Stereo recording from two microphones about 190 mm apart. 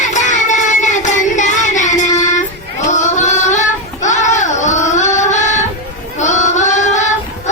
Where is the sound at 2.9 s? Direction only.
40° left (ahead or behind).